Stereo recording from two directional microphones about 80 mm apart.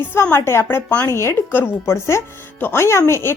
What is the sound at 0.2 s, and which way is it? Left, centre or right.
A woman's voice, left.